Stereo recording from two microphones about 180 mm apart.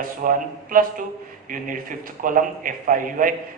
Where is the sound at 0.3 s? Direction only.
50° right (ahead or behind).